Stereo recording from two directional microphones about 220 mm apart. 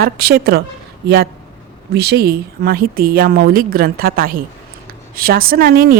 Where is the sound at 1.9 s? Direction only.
45° right (ahead or behind).